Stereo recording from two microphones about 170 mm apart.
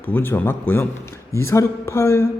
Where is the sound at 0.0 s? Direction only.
10° left (ahead or behind).